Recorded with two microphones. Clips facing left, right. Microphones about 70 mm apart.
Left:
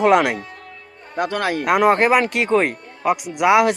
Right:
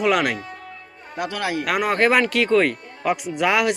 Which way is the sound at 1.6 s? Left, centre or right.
Left.